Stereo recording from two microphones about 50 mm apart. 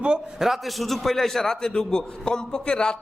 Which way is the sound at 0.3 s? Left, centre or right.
Centre.